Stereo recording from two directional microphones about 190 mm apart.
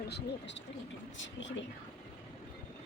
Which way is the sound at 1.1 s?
80° left.